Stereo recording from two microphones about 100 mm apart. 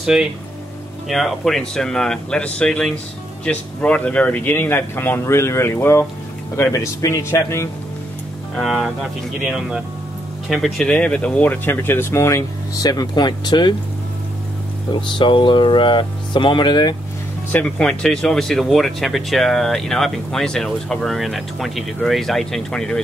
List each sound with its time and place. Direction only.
0.0 s speech: 5° right (ahead or behind); by 7.7 s 30° left (ahead or behind)
8.5 s speech: centre (ahead or behind)
10.9 s speech: 10° left (ahead or behind); by 13.7 s 50° left (ahead or behind)
14.9 s speech: 50° left (ahead or behind)
17.5 s speech: 15° left (ahead or behind)